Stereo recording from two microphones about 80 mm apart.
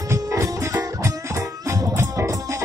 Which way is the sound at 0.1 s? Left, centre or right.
Right.